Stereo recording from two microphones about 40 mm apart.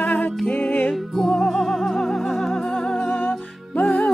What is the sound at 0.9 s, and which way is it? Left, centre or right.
Music, centre.